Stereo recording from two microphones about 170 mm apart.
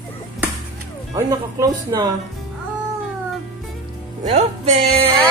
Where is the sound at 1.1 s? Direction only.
20° right (ahead or behind).